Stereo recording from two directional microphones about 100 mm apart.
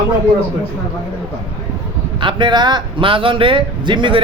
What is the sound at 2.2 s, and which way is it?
Speech, 50° right (ahead or behind).